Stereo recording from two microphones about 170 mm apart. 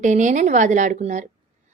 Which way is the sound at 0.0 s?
45° right (ahead or behind).